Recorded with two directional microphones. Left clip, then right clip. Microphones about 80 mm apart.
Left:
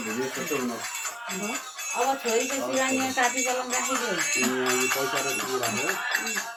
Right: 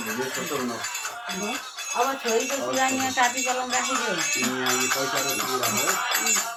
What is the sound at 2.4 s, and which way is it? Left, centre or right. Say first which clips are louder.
Music: right 1 dB; right.